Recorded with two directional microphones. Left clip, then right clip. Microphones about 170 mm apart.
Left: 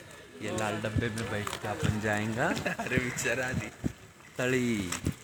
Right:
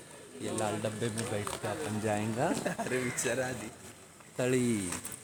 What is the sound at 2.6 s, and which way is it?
Speech, 30° right (ahead or behind).